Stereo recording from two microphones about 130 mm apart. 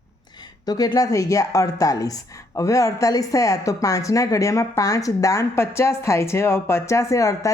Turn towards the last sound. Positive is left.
turn(degrees=25)  # may be behind; listen again after turning